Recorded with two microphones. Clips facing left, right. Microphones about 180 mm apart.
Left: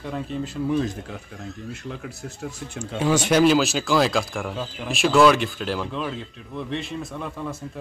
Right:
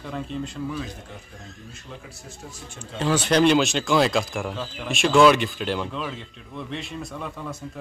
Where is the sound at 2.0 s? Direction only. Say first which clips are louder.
Left 8 dB; 70° left (ahead or behind).